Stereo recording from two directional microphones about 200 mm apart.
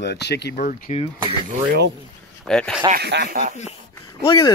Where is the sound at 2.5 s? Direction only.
5° left (ahead or behind).